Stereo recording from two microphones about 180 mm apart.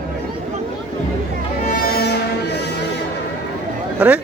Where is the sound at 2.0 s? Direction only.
65° left (ahead or behind).